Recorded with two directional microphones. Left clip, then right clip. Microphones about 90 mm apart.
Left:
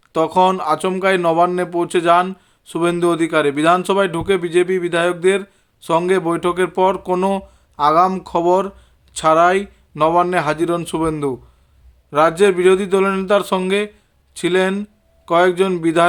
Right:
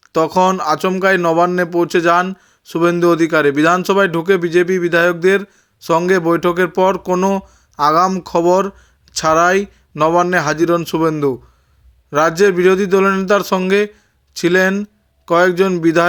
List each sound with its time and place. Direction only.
0.1 s speech: 20° right (ahead or behind)
7.8 s speech: 30° right (ahead or behind)
8.2 s speech: 20° right (ahead or behind)
12.4 s speech: 25° right (ahead or behind)